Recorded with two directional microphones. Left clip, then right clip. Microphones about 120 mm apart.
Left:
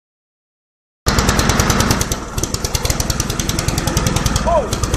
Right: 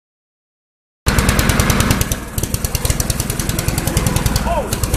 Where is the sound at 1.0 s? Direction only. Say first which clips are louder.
Left 1 dB; 30° right (ahead or behind).